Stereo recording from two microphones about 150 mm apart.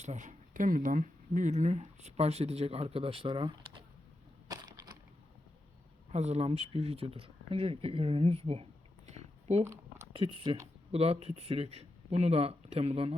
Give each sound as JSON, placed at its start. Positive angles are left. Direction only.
{"t": 0.0, "sound": "speech", "side_deg": -55}
{"t": 4.4, "sound": "crushing", "side_deg": -25}
{"t": 6.1, "sound": "speech", "side_deg": -45}
{"t": 9.0, "sound": "a sound", "side_deg": -45}
{"t": 10.1, "sound": "speech", "side_deg": -40}